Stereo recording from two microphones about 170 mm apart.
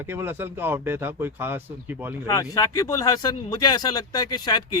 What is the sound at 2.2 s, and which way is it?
Speech, 20° left (ahead or behind).